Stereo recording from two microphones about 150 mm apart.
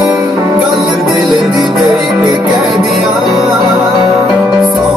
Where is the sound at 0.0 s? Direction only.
20° right (ahead or behind).